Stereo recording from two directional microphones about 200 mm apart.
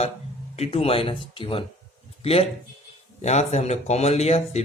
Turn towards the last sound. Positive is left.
turn(degrees=30)  # may be behind; listen again after turning